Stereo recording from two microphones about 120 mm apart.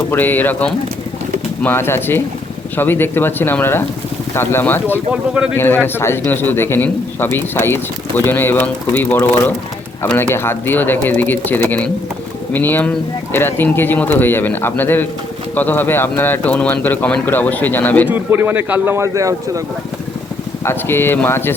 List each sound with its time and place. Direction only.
0.1 s a man's voice: 15° left (ahead or behind)
5.1 s a man's voice: 10° right (ahead or behind)
5.5 s a man's voice: 15° left (ahead or behind)
10.3 s a man's voice: 20° left (ahead or behind)
18.1 s a man's voice: 15° right (ahead or behind)
20.7 s speech: 20° left (ahead or behind)